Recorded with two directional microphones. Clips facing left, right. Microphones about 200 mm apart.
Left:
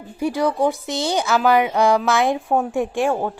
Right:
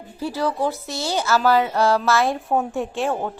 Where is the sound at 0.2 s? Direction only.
15° left (ahead or behind).